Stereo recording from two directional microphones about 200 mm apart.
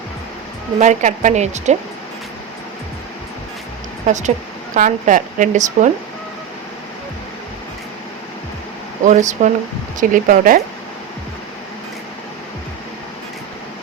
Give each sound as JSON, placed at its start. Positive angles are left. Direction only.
{"t": 0.8, "sound": "a woman's voice", "side_deg": -35}
{"t": 4.0, "sound": "a woman's voice", "side_deg": -35}
{"t": 9.0, "sound": "a woman's voice", "side_deg": -35}